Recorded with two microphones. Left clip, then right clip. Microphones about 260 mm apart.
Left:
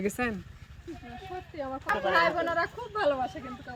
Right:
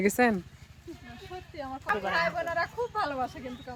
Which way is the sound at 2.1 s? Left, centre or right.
Right.